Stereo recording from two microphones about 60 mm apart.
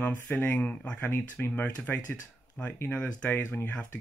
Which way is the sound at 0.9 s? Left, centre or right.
Left.